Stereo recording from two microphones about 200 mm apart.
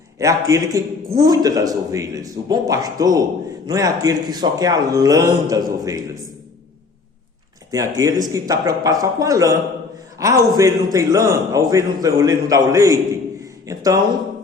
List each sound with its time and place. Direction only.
0.2 s a man's voice: 15° right (ahead or behind)
7.7 s a man's voice: 15° right (ahead or behind)